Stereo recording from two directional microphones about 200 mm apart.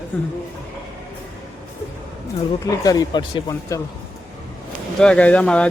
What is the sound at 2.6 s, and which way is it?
Speech, 15° left (ahead or behind).